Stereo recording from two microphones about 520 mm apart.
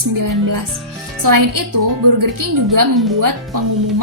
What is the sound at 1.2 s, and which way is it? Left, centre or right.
Speech, right.